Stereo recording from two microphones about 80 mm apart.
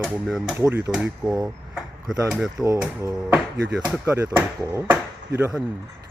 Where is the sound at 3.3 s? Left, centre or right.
Centre.